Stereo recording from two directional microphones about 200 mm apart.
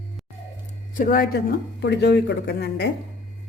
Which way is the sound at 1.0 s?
45° left (ahead or behind).